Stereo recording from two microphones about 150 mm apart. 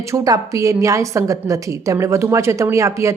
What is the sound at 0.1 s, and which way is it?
A woman's voice, 20° right (ahead or behind).